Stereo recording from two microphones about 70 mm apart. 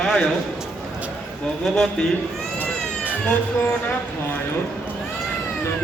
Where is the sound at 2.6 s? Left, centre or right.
Right.